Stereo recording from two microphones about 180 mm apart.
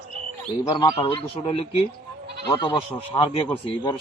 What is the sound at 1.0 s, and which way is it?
A man's voice, 30° left (ahead or behind).